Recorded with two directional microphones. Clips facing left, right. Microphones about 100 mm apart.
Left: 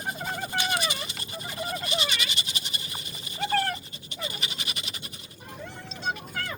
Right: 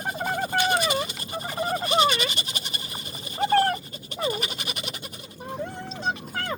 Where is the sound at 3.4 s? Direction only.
35° right (ahead or behind).